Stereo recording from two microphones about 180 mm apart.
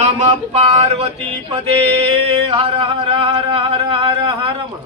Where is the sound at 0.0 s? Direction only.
40° right (ahead or behind).